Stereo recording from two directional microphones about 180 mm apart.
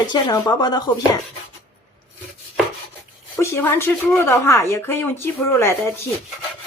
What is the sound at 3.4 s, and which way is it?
Speech, 15° left (ahead or behind).